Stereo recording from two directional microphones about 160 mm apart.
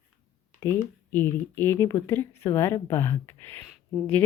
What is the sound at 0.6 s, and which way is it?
Speech, 15° left (ahead or behind).